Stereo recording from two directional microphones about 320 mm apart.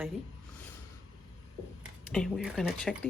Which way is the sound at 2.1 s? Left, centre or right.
Centre.